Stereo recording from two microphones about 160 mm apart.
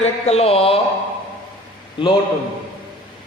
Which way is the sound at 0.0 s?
40° left (ahead or behind).